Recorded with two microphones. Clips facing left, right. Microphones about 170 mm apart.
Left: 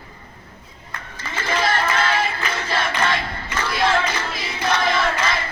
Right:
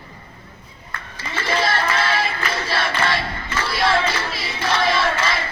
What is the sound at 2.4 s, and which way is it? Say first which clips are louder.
Battle cry: right 1 dB; 15° left (ahead or behind).